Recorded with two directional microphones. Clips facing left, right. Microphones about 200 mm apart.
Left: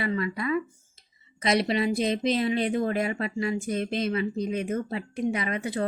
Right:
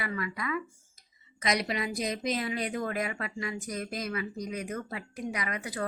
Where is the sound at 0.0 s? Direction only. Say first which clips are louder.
Left 7 dB; 25° left (ahead or behind).